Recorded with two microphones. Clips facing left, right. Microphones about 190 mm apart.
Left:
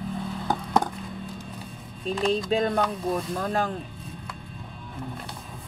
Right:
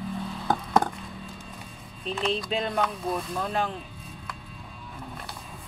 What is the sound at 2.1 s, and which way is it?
Speech, 40° left (ahead or behind).